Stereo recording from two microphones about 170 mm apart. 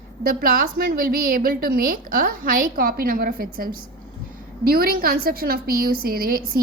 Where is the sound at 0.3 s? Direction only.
60° right (ahead or behind).